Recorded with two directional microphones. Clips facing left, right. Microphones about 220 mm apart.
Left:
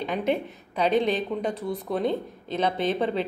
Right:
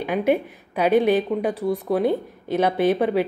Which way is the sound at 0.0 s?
10° right (ahead or behind).